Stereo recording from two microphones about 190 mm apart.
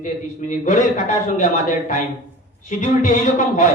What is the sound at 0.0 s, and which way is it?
A man's voice, 40° left (ahead or behind).